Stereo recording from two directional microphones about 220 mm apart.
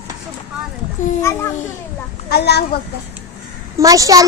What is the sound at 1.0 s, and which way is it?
Speech, 35° left (ahead or behind).